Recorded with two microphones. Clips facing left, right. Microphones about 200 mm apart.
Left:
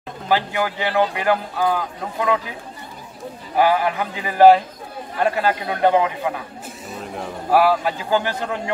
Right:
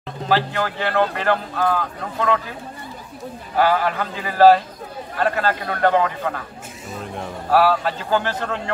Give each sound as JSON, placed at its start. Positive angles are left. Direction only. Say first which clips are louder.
{"t": 0.3, "sound": "speech", "louder": "even", "side_deg": 10}
{"t": 3.5, "sound": "speech", "louder": "left 1 dB", "side_deg": 15}
{"t": 7.4, "sound": "speech", "louder": "left 1 dB", "side_deg": 15}